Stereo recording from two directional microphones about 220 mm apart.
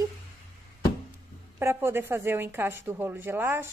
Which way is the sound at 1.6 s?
10° right (ahead or behind).